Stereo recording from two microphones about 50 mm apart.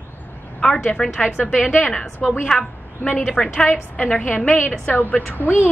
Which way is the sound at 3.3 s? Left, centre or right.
Left.